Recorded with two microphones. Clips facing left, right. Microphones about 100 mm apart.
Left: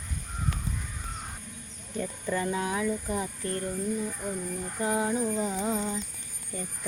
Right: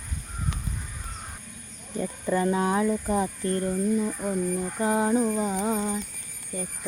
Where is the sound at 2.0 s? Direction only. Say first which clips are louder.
Right 5 dB; 20° right (ahead or behind).